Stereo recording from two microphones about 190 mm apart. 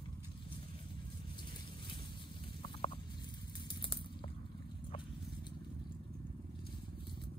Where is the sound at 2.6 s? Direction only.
30° left (ahead or behind).